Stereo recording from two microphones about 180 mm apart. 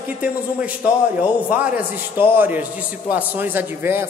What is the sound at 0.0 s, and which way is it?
Speech, 10° right (ahead or behind).